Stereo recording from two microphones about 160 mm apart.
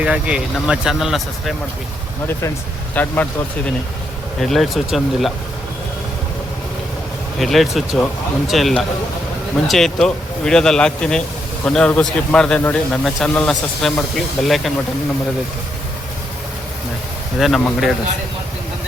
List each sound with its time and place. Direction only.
0.0 s speech: 5° right (ahead or behind)
2.9 s speech: 10° left (ahead or behind)
4.4 s speech: centre (ahead or behind)
7.3 s speech: centre (ahead or behind)
17.4 s speech: centre (ahead or behind)